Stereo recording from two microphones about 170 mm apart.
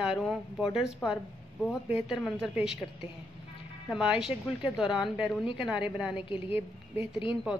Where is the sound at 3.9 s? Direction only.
5° right (ahead or behind).